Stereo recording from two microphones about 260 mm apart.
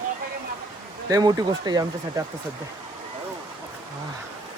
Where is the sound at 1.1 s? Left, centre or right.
Centre.